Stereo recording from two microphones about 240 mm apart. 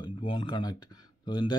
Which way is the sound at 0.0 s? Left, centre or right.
Centre.